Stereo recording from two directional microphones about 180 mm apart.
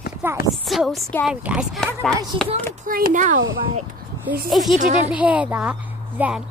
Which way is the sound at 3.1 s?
45° right (ahead or behind).